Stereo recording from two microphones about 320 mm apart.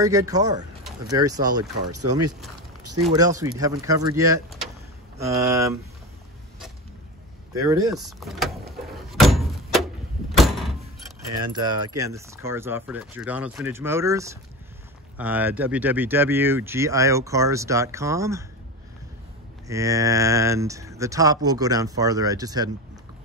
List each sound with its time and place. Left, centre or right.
0.0 s speech: centre
1.5 s speech: right
3.1 s speech: centre
5.5 s speech: centre
7.5 s speech: centre
7.9 s speech: centre
8.9 s door: centre
11.5 s speech: centre
19.7 s speech: centre